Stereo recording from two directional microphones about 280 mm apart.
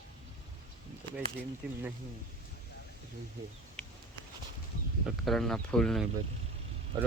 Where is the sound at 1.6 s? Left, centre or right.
Centre.